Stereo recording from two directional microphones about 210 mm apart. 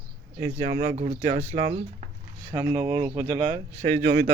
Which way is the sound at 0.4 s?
30° right (ahead or behind).